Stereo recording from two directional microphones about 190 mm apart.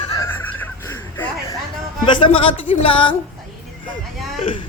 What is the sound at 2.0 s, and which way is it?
Speech, 25° left (ahead or behind).